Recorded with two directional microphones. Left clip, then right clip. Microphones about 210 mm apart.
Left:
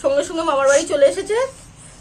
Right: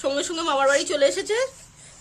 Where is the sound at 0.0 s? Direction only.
50° right (ahead or behind).